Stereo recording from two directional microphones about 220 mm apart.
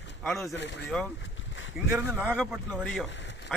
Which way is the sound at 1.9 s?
5° right (ahead or behind).